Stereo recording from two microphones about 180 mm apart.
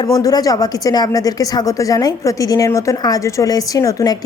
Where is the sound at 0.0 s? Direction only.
20° left (ahead or behind).